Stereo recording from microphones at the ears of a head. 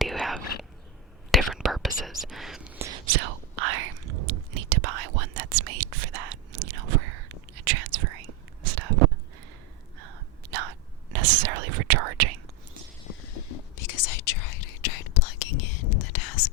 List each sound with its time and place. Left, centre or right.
0.0 s whispering: centre
2.7 s whispering: right
13.1 s whispering: left